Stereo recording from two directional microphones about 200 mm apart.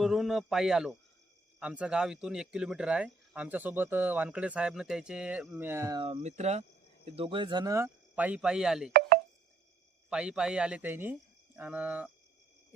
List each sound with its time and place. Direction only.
0.0 s speech: centre (ahead or behind)
6.0 s speech: 30° right (ahead or behind); by 8.9 s centre (ahead or behind)
8.9 s chopping: 50° right (ahead or behind)
10.1 s speech: 5° right (ahead or behind)